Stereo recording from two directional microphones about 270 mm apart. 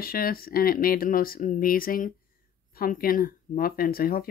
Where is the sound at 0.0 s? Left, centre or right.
Left.